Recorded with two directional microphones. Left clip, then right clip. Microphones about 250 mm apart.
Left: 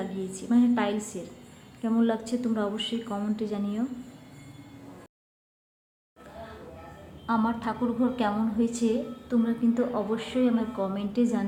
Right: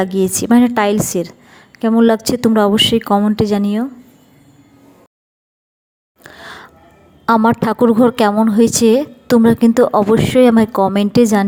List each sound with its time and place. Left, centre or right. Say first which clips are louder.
0.0 s a woman's voice: right 19 dB; right
7.3 s a woman's voice: right 15 dB; right